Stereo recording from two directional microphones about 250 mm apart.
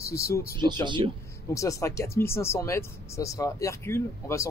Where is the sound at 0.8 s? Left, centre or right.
Centre.